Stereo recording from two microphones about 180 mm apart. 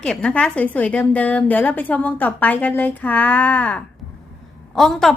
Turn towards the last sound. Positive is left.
turn(degrees=0)  # may be behind; listen again after turning